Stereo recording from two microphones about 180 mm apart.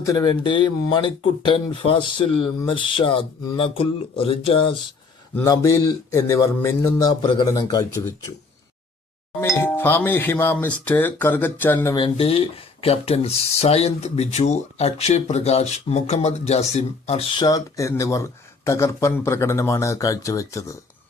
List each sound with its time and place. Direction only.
0.0 s speech: 20° left (ahead or behind)
5.3 s speech: 15° left (ahead or behind)
9.4 s speech: 15° left (ahead or behind)
11.9 s speech: 30° left (ahead or behind)